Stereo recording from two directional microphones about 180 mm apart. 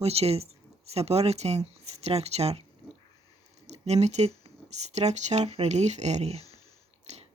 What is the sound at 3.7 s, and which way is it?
Speech, 35° right (ahead or behind).